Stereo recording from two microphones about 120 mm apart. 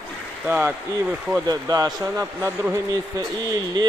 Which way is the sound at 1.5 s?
35° right (ahead or behind).